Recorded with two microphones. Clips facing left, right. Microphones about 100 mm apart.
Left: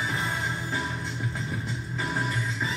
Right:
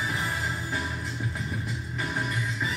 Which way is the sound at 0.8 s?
30° left (ahead or behind).